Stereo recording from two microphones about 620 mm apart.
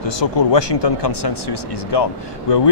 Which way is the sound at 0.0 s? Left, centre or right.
Left.